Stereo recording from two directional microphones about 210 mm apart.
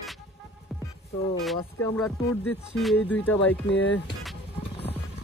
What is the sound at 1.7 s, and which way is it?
Music, centre (ahead or behind).